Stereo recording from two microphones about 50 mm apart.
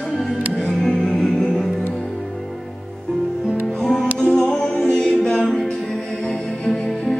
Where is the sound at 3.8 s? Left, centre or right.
Centre.